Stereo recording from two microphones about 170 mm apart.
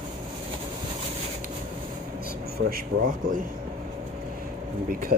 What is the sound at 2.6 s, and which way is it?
Speech, 55° right (ahead or behind).